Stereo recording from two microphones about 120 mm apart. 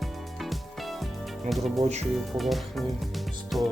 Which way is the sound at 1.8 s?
70° right (ahead or behind).